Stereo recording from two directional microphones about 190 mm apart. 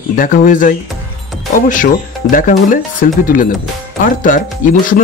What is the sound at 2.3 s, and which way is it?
Speech, 45° left (ahead or behind).